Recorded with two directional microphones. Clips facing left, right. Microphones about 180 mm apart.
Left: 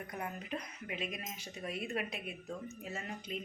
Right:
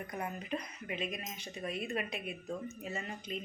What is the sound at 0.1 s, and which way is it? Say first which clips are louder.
Speech: right 3 dB; centre (ahead or behind).